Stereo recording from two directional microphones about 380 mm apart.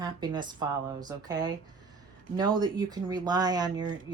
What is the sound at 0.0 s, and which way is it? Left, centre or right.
Speech, centre.